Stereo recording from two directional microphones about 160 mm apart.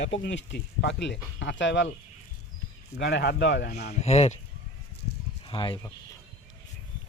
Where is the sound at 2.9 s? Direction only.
90° left.